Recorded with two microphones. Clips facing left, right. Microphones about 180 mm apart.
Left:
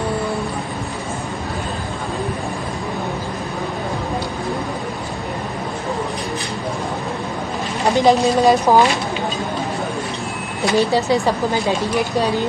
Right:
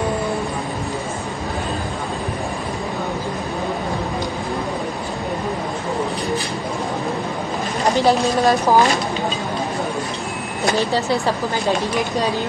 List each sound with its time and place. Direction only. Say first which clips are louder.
7.9 s a woman's voice: left 3 dB; 15° left (ahead or behind)
10.8 s a woman's voice: left 6 dB; 15° left (ahead or behind)